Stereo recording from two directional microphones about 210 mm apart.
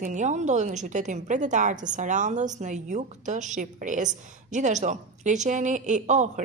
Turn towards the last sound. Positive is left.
turn(degrees=-35)  # may be behind; listen again after turning